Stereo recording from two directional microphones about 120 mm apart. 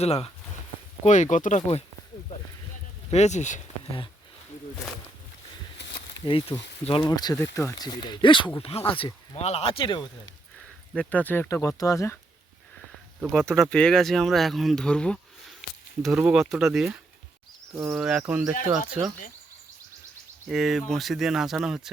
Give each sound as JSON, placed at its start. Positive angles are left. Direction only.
{"t": 0.0, "sound": "speech", "side_deg": 60}
{"t": 1.0, "sound": "speech", "side_deg": 90}
{"t": 3.1, "sound": "speech", "side_deg": 70}
{"t": 6.5, "sound": "speech", "side_deg": 20}
{"t": 6.8, "sound": "speech", "side_deg": 45}
{"t": 7.2, "sound": "speech", "side_deg": 30}
{"t": 8.7, "sound": "speech", "side_deg": 60}
{"t": 9.8, "sound": "speech", "side_deg": 40}
{"t": 10.9, "sound": "speech", "side_deg": 10}
{"t": 11.4, "sound": "speech", "side_deg": 25}
{"t": 13.2, "sound": "speech", "side_deg": 5}
{"t": 16.1, "sound": "speech", "side_deg": -5}
{"t": 20.5, "sound": "speech", "side_deg": 0}